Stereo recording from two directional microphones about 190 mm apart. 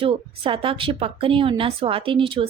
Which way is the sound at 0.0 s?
30° right (ahead or behind).